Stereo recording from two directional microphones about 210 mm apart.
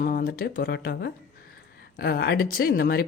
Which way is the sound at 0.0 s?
40° left (ahead or behind).